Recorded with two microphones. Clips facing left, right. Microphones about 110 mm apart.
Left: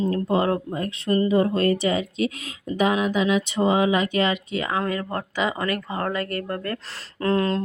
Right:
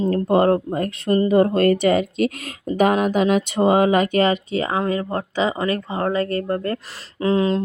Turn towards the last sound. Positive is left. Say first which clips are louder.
# right 3 dB
turn(degrees=-15)  # may be behind; listen again after turning